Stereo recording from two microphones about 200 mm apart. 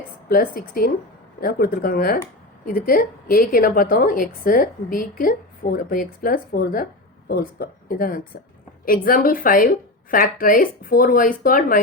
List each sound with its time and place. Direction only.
0.3 s a woman's voice: 45° left (ahead or behind)